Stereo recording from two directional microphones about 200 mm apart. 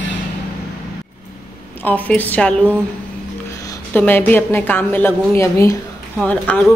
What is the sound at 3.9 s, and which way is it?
A woman's voice, 10° left (ahead or behind).